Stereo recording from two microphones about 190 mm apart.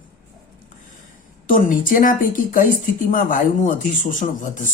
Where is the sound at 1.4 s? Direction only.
45° left (ahead or behind).